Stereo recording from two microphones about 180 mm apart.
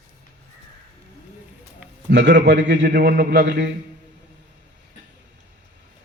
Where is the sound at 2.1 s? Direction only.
75° right (ahead or behind).